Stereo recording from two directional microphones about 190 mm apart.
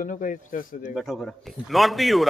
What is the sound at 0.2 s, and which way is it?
Speech, 40° left (ahead or behind).